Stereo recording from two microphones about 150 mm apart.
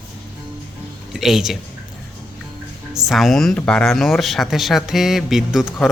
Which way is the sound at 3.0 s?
Centre (ahead or behind).